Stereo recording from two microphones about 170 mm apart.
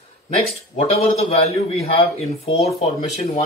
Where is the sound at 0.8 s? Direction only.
40° left (ahead or behind).